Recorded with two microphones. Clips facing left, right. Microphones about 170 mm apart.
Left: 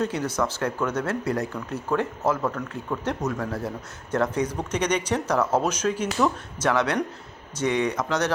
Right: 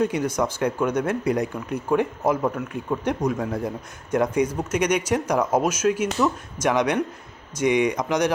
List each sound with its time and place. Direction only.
0.0 s speech: 10° right (ahead or behind)